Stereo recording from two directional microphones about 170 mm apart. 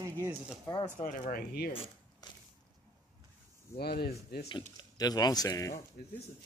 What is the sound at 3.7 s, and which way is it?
Speech, 65° left (ahead or behind).